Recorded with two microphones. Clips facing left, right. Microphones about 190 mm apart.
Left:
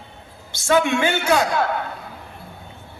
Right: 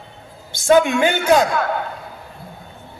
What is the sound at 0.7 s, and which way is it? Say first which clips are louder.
Speech: right 4 dB; 35° right (ahead or behind).